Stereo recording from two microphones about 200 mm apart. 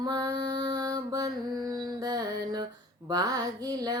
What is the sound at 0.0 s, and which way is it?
Mantra, 20° right (ahead or behind).